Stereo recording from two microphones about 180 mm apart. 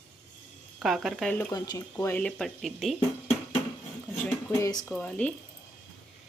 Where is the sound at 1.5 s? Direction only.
20° left (ahead or behind).